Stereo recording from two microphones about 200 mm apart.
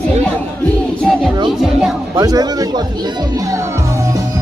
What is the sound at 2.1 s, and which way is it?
Speech, 20° right (ahead or behind).